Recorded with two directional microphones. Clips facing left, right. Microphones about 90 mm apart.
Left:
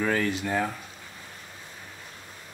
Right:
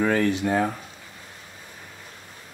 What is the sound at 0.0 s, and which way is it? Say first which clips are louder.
Speech: right 4 dB; 40° right (ahead or behind).